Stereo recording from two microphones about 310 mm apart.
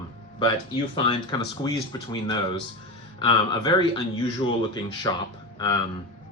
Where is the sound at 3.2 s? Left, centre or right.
Centre.